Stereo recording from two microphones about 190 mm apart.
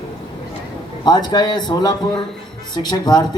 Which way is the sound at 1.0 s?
20° left (ahead or behind).